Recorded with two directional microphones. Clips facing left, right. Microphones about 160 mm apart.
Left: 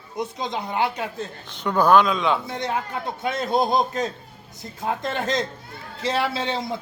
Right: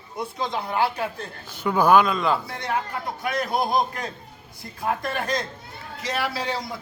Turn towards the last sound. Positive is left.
turn(degrees=25)  # may be behind; listen again after turning